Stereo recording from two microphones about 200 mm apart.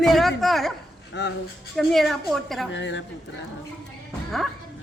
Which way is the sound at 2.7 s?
65° left (ahead or behind).